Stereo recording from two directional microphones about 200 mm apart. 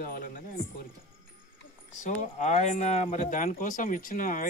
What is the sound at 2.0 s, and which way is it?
Speech, 35° left (ahead or behind).